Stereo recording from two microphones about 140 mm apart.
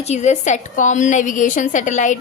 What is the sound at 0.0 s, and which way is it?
A woman's voice, 55° left (ahead or behind).